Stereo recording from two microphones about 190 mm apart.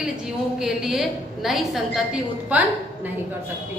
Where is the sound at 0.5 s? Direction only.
Centre (ahead or behind).